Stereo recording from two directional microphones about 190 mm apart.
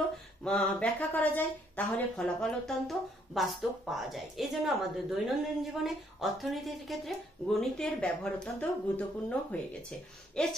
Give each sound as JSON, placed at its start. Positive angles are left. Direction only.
{"t": 0.4, "sound": "speech", "side_deg": 5}